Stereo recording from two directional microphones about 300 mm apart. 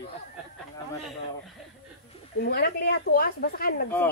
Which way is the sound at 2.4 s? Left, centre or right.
Left.